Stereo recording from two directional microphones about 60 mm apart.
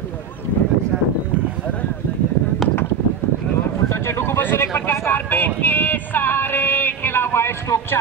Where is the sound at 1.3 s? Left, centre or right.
Left.